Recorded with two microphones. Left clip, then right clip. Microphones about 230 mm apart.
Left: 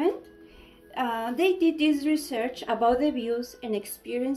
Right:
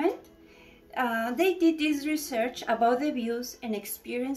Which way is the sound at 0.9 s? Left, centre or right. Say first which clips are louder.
Even; centre.